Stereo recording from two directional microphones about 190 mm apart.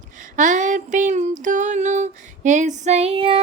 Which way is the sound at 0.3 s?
40° right (ahead or behind).